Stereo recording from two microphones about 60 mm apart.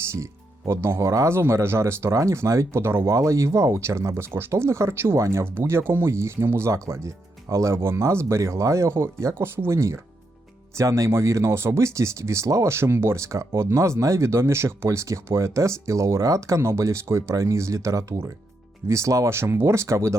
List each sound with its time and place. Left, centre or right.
0.7 s speech: right
10.8 s speech: right